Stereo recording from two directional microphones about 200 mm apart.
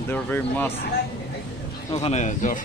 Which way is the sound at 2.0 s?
35° left (ahead or behind).